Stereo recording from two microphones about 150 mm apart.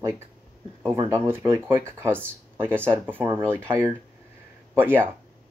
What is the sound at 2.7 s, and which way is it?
Speech, 10° left (ahead or behind).